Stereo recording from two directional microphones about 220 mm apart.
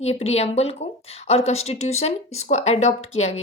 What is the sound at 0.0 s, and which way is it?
Speech, 30° left (ahead or behind).